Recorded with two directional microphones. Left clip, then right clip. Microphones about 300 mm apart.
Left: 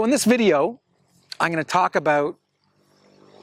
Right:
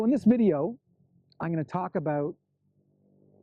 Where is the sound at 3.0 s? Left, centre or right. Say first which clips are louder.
Left 13 dB; centre.